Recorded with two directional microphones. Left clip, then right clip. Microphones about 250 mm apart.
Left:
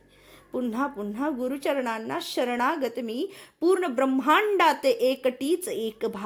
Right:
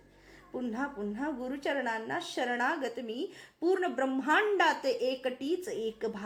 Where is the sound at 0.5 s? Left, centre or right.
Left.